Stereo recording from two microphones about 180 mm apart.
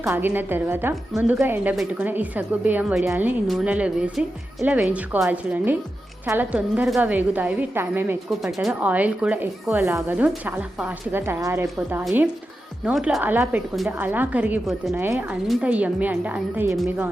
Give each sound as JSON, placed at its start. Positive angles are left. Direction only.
{"t": 0.0, "sound": "speech", "side_deg": -10}
{"t": 8.3, "sound": "a woman's voice", "side_deg": 0}